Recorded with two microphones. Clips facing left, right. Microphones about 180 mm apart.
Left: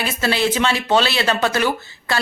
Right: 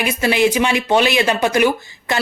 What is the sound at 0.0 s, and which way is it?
Speech, 15° right (ahead or behind).